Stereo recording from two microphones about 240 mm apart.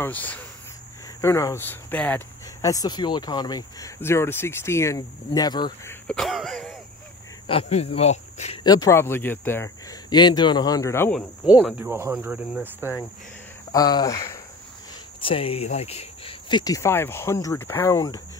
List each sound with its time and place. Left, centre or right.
0.0 s speech: centre
6.0 s throat clearing: centre
7.4 s speech: left
8.6 s speech: centre
13.7 s speech: centre